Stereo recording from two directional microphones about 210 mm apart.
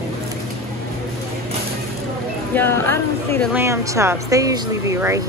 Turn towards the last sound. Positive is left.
turn(degrees=-15)  # may be behind; listen again after turning